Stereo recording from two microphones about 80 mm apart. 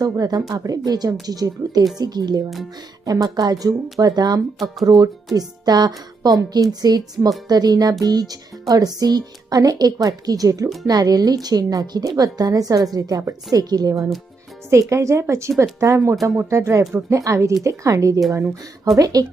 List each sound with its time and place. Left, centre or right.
0.0 s a woman's voice: right